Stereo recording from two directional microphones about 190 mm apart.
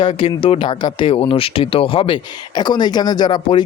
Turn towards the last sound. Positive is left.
turn(degrees=20)  # may be behind; listen again after turning